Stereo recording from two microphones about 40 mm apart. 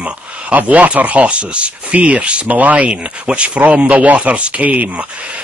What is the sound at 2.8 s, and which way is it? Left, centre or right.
Speech, right.